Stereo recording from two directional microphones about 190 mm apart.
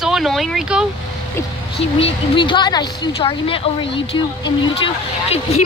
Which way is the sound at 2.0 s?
25° left (ahead or behind).